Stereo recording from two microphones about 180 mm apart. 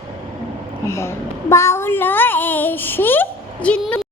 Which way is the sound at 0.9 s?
15° left (ahead or behind).